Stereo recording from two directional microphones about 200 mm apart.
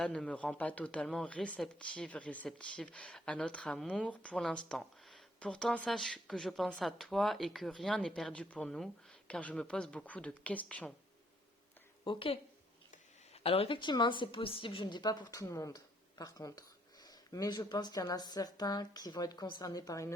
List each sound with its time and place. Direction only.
0.0 s a woman's voice: 5° left (ahead or behind)
12.0 s a woman's voice: 25° left (ahead or behind)